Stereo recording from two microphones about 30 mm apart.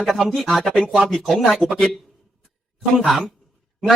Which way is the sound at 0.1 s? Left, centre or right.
Centre.